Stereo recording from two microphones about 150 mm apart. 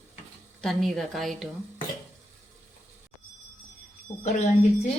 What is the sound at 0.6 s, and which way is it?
Speech, centre (ahead or behind).